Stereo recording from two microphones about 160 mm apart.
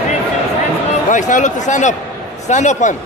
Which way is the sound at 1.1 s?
50° left (ahead or behind).